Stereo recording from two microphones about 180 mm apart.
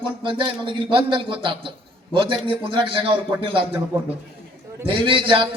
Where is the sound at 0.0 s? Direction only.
30° right (ahead or behind).